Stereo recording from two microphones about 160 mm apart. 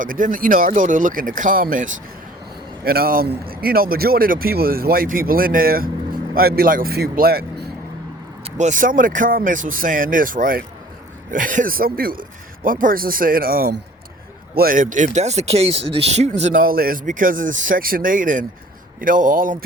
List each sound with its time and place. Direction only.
0.0 s speech: 55° right (ahead or behind)
2.8 s a man's voice: 70° right (ahead or behind)
8.4 s speech: 45° right (ahead or behind); by 13.8 s 75° right (ahead or behind)
14.5 s speech: 65° right (ahead or behind)